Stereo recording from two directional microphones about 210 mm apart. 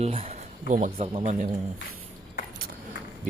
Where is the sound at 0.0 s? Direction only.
30° right (ahead or behind).